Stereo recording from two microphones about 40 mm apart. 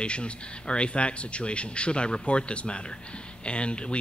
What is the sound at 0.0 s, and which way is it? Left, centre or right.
Speech, left.